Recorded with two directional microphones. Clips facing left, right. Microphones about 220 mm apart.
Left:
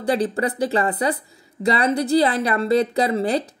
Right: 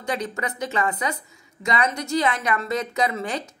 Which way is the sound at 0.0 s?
35° left (ahead or behind).